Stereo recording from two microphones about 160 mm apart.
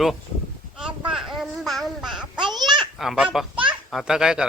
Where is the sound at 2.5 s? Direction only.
25° right (ahead or behind).